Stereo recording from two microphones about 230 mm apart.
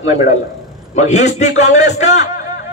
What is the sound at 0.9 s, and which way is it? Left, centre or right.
A man's voice, left.